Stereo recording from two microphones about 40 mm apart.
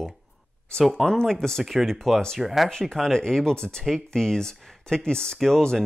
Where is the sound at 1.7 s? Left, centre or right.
Centre.